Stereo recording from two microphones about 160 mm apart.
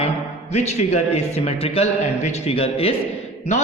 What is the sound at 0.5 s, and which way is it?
A man's voice, 45° left (ahead or behind).